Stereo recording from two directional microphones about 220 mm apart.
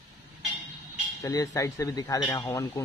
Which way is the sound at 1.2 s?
15° left (ahead or behind).